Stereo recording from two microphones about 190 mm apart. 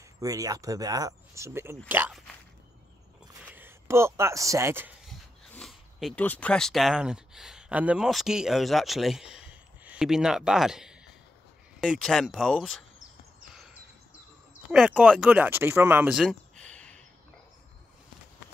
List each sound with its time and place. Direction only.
0.2 s speech: 20° right (ahead or behind)
3.5 s speech: 10° right (ahead or behind)
5.0 s speech: centre (ahead or behind)
14.7 s speech: 5° right (ahead or behind)